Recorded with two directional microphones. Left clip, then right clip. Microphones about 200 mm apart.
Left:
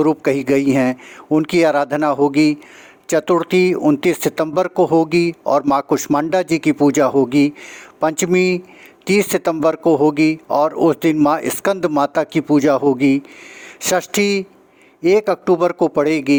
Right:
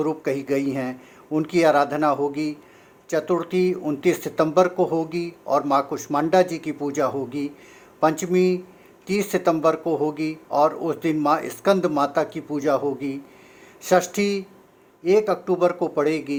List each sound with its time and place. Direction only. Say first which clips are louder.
0.0 s speech: left 8 dB; 45° left (ahead or behind)